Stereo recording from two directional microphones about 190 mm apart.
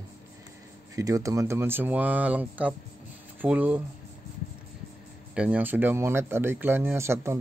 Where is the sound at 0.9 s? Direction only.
15° right (ahead or behind).